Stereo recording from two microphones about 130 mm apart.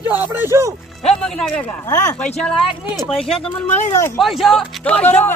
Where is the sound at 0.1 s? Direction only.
15° right (ahead or behind).